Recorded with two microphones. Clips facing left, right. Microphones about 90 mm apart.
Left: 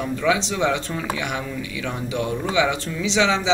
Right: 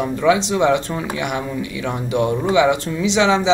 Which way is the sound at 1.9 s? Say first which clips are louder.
Right 7 dB; 45° right (ahead or behind).